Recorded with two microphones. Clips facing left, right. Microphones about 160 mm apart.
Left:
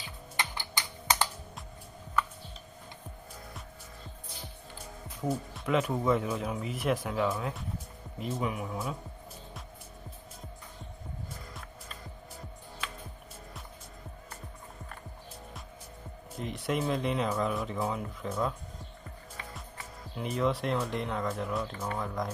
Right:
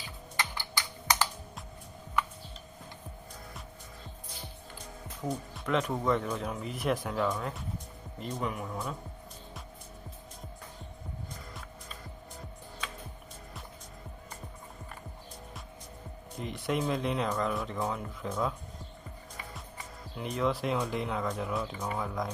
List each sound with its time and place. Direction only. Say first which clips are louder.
0.3 s typing: even; 15° left (ahead or behind)
5.2 s speech: left 3 dB; 5° left (ahead or behind)
16.4 s speech: even; centre (ahead or behind)
20.1 s speech: left 1 dB; centre (ahead or behind)